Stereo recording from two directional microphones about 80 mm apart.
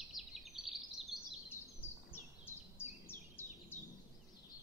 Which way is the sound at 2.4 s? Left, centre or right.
Left.